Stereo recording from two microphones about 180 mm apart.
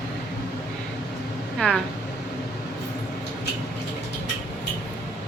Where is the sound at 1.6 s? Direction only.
Centre (ahead or behind).